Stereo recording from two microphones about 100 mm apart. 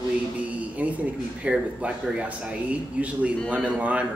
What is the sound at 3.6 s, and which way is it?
Speech, 15° right (ahead or behind).